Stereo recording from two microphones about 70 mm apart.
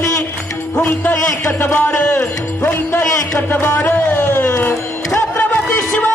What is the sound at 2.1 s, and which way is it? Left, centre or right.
Music, left.